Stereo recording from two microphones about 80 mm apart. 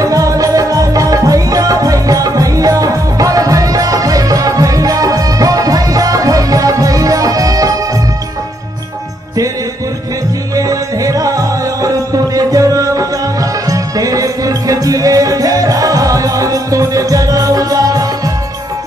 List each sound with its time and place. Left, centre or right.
0.0 s music: right
10.5 s music: right